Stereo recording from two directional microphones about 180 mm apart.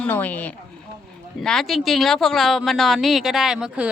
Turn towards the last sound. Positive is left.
turn(degrees=-5)  # may be behind; listen again after turning